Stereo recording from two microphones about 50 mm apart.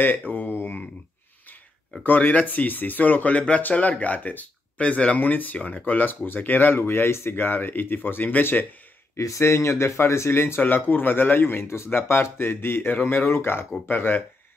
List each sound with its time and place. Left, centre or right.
0.3 s a sound: left
2.0 s speech: left
5.2 s speech: left
9.1 s speech: left
10.7 s speech: left
11.6 s speech: left
13.8 s speech: left